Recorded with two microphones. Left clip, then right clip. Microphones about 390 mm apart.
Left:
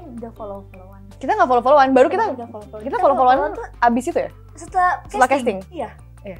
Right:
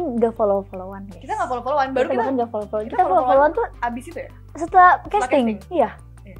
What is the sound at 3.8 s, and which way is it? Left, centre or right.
Speech, left.